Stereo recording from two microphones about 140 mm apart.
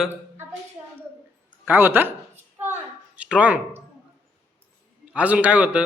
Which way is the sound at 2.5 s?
15° right (ahead or behind).